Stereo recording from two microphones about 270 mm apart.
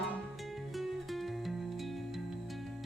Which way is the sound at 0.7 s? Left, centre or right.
Centre.